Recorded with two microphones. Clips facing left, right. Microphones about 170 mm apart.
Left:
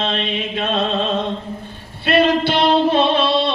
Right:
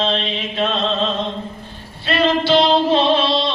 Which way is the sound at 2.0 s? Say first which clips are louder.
Left 1 dB; 60° left (ahead or behind).